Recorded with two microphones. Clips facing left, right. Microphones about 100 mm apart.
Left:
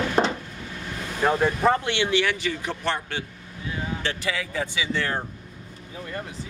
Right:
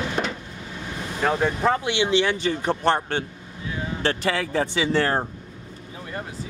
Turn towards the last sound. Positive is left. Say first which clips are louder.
# right 6 dB
turn(degrees=-45)  # may be behind; listen again after turning